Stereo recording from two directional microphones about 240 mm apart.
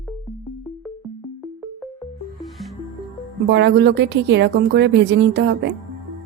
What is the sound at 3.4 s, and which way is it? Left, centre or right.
Speech, right.